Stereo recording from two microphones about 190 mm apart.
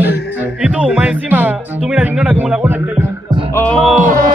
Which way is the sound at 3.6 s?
5° left (ahead or behind).